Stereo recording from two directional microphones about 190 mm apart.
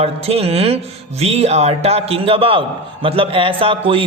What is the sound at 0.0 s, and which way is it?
A man's voice, 30° right (ahead or behind).